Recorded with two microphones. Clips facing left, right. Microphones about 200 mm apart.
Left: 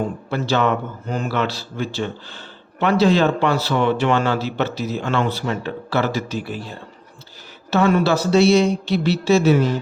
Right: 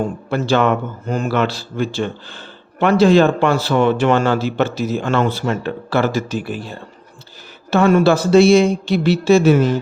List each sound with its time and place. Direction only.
0.3 s a man's voice: 50° right (ahead or behind)
7.7 s a man's voice: 50° right (ahead or behind)